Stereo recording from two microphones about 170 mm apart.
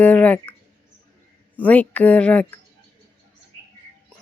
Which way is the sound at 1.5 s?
10° left (ahead or behind).